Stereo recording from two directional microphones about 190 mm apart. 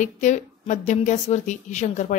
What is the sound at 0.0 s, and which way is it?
A woman's voice, 40° left (ahead or behind).